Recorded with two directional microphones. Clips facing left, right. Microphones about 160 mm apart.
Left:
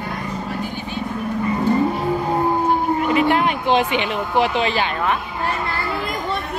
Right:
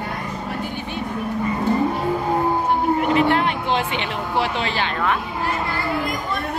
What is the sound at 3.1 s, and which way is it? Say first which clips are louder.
Speech: left 1 dB; 15° left (ahead or behind).